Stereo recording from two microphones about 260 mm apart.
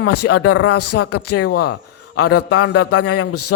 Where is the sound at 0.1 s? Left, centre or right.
Left.